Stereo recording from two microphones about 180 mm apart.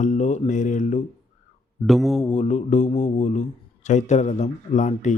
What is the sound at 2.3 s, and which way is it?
Speech, 40° left (ahead or behind).